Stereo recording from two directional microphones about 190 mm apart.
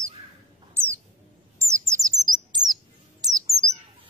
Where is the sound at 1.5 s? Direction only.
15° right (ahead or behind).